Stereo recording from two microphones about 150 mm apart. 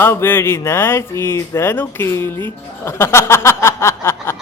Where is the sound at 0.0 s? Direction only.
15° left (ahead or behind).